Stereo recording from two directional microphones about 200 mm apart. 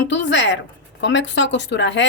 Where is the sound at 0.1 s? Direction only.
60° left (ahead or behind).